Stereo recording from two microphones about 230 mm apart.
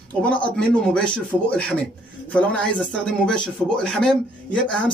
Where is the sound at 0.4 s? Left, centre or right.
Centre.